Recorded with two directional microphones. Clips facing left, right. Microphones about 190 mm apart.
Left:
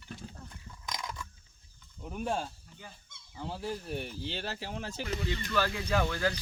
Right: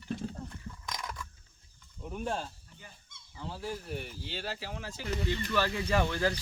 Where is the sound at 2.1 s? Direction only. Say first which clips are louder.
Left 2 dB; 5° left (ahead or behind).